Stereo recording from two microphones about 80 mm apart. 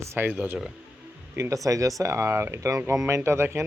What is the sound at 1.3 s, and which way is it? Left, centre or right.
Speech, right.